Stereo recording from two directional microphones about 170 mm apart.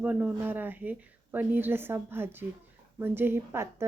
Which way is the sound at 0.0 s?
10° right (ahead or behind).